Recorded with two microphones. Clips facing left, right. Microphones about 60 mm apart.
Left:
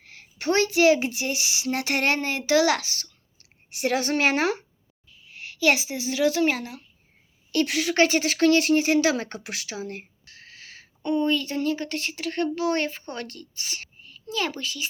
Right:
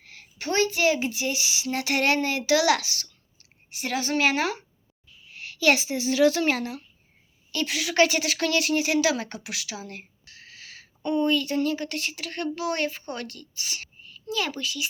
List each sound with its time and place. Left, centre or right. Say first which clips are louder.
0.0 s a sound: even; left
0.3 s speech: left 3 dB; left
3.8 s speech: left 2 dB; left
5.4 s speech: even; left
7.5 s speech: left 2 dB; left